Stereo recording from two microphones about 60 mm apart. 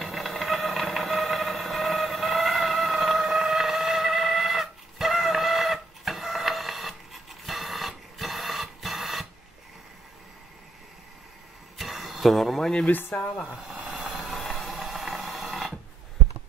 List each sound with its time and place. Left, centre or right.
0.0 s a sound: centre
7.4 s printer: centre
11.8 s a sound: centre
12.8 s speech: left
13.6 s vehicle: centre
14.3 s mechanisms: centre